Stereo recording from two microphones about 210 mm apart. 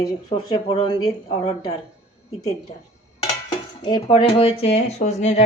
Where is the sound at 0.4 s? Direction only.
20° left (ahead or behind).